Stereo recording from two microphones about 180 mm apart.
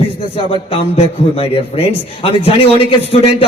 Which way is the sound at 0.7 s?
35° left (ahead or behind).